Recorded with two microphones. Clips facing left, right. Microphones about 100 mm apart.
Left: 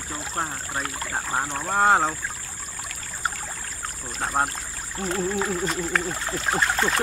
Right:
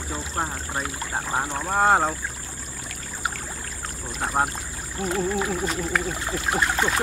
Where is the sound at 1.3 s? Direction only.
5° right (ahead or behind).